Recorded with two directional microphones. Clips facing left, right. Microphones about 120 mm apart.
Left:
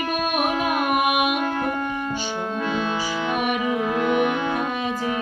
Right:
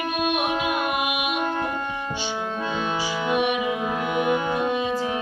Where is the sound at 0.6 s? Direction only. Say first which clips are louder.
Left 3 dB; 55° left (ahead or behind).